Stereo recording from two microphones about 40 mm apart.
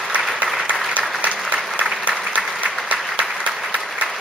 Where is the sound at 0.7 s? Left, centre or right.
Right.